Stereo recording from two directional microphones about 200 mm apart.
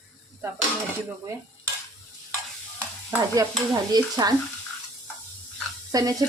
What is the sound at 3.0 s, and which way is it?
Stir, 15° right (ahead or behind).